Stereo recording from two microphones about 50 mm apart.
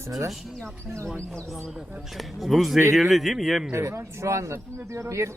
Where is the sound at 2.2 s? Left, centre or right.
Centre.